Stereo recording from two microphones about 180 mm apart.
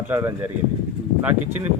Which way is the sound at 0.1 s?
15° right (ahead or behind).